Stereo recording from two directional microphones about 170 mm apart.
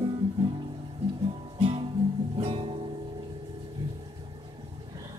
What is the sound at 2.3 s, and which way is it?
Music, 30° right (ahead or behind).